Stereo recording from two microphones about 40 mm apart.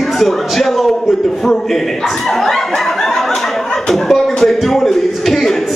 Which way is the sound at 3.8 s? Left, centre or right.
Centre.